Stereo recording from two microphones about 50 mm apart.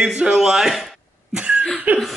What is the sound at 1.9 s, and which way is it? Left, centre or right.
Chuckle, right.